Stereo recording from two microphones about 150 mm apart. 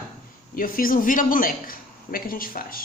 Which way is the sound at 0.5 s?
70° left (ahead or behind).